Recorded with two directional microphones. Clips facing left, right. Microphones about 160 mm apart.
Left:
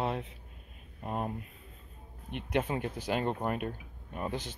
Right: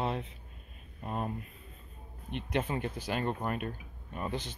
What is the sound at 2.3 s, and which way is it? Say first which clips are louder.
Speech: left 1 dB; 10° left (ahead or behind).